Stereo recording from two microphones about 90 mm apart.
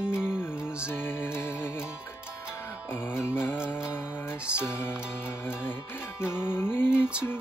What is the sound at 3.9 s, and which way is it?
Music, 10° right (ahead or behind).